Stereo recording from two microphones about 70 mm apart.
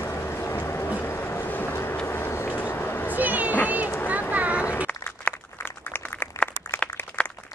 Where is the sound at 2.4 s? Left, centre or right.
Left.